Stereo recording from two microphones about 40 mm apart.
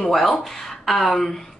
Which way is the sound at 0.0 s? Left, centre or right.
Centre.